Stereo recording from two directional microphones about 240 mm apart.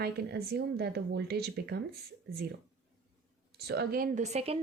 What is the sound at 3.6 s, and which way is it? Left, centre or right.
Speech, right.